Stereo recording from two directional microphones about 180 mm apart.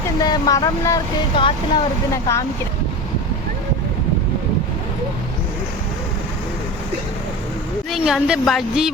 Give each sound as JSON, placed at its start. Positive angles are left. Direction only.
{"t": 0.2, "sound": "speech", "side_deg": 20}
{"t": 2.1, "sound": "speech", "side_deg": 15}
{"t": 7.9, "sound": "a woman's voice", "side_deg": 0}